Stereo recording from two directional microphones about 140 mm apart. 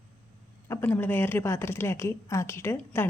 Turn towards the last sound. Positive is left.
turn(degrees=15)  # may be behind; listen again after turning